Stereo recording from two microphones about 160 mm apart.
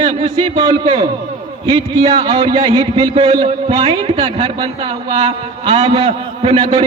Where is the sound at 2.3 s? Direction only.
30° right (ahead or behind).